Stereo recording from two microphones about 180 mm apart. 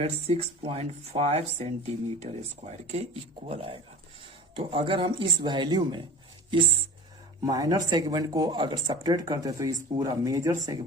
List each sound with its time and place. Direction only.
0.0 s speech: 35° right (ahead or behind); by 10.8 s 15° right (ahead or behind)